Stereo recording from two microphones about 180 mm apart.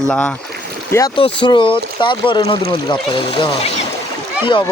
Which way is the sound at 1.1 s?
25° left (ahead or behind).